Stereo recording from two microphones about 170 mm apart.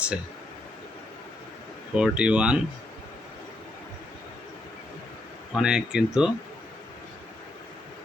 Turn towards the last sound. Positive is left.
turn(degrees=-5)  # may be behind; listen again after turning